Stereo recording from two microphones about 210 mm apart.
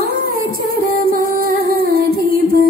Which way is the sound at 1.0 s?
45° right (ahead or behind).